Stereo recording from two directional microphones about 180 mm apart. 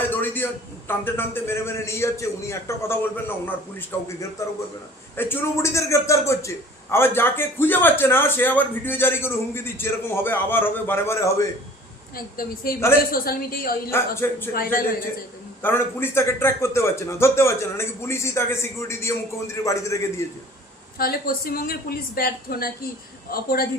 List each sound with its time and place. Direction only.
0.1 s a sound: 10° left (ahead or behind)
0.9 s a man's voice: 10° left (ahead or behind)
12.1 s a woman's voice: 55° left (ahead or behind)
14.2 s a man's voice: 15° left (ahead or behind)
14.5 s a man's voice: 55° left (ahead or behind)
15.6 s a man's voice: 10° left (ahead or behind)
21.0 s a woman's voice: 55° left (ahead or behind)